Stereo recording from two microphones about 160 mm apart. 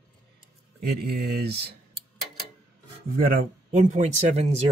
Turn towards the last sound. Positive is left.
turn(degrees=-45)  # may be behind; listen again after turning